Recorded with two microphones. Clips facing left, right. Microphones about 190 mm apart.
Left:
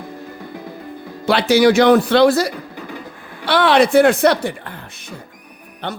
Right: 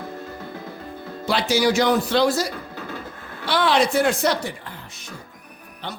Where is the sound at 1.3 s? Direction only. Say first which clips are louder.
Left 7 dB; 65° left (ahead or behind).